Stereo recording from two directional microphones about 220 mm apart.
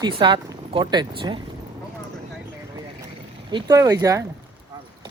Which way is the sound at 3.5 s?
15° right (ahead or behind).